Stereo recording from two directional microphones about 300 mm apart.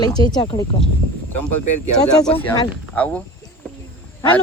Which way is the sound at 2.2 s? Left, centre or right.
Centre.